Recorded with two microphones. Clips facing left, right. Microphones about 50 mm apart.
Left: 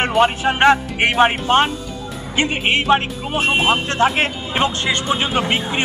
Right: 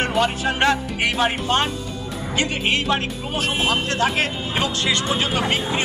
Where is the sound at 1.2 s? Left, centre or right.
Left.